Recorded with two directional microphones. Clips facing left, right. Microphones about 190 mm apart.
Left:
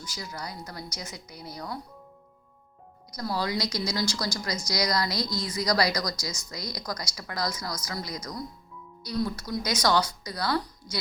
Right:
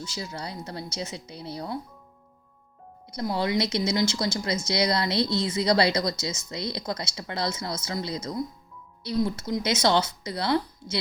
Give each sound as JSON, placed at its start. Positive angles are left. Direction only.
{"t": 0.0, "sound": "speech", "side_deg": -25}
{"t": 3.1, "sound": "speech", "side_deg": -25}